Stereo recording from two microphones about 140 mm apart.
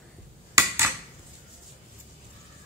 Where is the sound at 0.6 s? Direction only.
15° right (ahead or behind).